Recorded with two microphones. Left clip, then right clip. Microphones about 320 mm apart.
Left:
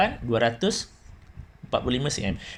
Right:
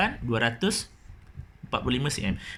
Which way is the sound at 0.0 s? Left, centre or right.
Centre.